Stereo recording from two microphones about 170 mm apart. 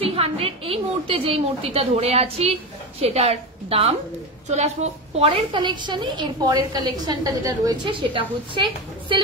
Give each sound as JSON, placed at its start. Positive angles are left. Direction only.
{"t": 0.0, "sound": "a woman's voice", "side_deg": -35}